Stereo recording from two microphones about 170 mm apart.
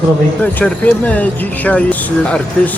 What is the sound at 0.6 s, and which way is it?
Speech, 10° left (ahead or behind).